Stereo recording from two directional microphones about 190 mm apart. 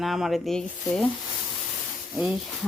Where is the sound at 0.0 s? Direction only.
Centre (ahead or behind).